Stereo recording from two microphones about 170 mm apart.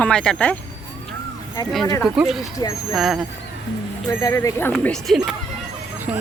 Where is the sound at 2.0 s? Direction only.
Centre (ahead or behind).